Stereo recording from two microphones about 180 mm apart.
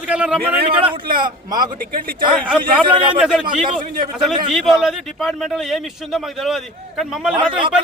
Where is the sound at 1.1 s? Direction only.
25° right (ahead or behind).